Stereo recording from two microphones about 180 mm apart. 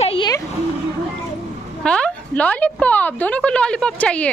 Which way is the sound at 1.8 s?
5° left (ahead or behind).